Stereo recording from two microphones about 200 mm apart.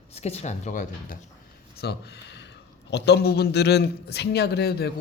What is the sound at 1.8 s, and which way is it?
A man's voice, 55° left (ahead or behind).